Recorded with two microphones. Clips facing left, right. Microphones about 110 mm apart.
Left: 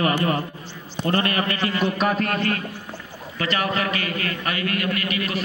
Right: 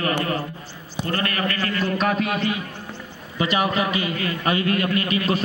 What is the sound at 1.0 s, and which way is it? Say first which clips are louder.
Speech: left 3 dB; 25° left (ahead or behind).